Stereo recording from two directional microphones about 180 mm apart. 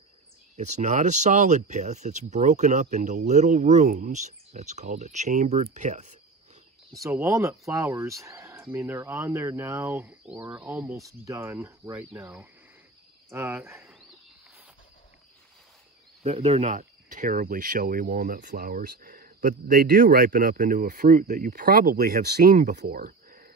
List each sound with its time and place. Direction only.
0.6 s speech: 40° right (ahead or behind)
7.0 s speech: 15° right (ahead or behind)
16.2 s speech: 35° right (ahead or behind); by 23.5 s 55° right (ahead or behind)